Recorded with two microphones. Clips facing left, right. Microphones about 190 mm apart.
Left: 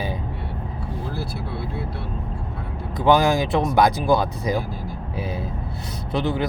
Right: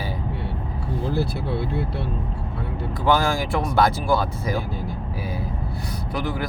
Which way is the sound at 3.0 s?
20° left (ahead or behind).